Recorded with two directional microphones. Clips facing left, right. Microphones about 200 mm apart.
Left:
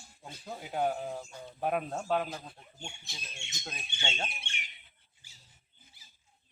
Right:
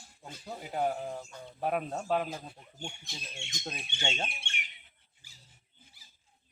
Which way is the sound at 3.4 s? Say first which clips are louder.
Right 4 dB; 30° right (ahead or behind).